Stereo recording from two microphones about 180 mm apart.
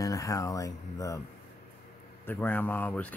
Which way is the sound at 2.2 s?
10° left (ahead or behind).